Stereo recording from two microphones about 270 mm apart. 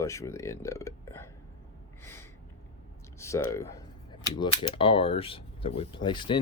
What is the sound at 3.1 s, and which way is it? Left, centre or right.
Speech, centre.